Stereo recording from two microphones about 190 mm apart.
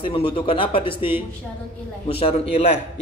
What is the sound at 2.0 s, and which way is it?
Speech, 30° left (ahead or behind).